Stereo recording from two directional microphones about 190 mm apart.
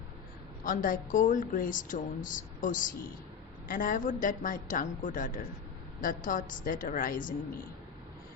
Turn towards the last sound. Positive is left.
turn(degrees=45)  # may be behind; listen again after turning